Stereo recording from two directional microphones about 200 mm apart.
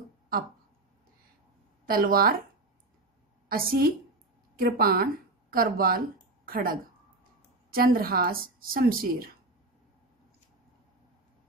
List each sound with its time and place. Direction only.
1.9 s speech: 45° right (ahead or behind)
3.4 s a woman's voice: 45° right (ahead or behind)